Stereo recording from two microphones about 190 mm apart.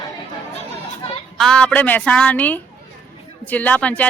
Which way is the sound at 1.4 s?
5° left (ahead or behind).